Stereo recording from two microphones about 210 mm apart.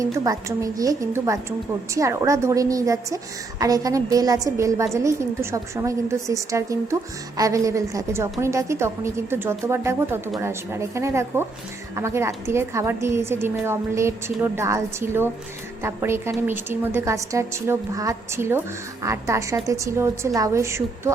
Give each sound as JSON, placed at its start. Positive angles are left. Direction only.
{"t": 0.0, "sound": "a woman's voice", "side_deg": -15}